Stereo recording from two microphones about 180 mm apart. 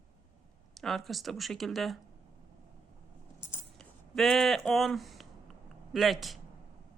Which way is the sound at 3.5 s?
5° left (ahead or behind).